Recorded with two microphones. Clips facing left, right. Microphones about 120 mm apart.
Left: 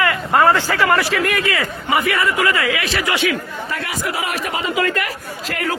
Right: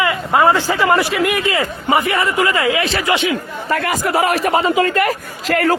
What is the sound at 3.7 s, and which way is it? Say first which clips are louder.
Speech: right 8 dB; 50° right (ahead or behind).